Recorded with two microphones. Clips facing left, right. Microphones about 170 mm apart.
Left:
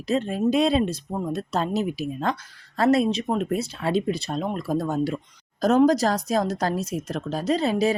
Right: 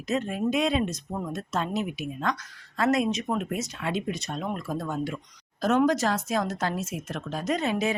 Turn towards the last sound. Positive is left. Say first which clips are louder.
# left 5 dB
turn(degrees=35)  # may be behind; listen again after turning